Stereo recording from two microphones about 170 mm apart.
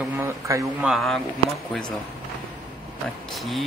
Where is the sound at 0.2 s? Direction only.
15° right (ahead or behind).